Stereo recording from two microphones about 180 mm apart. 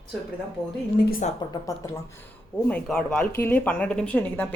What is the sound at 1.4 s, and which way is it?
Speech, 20° left (ahead or behind).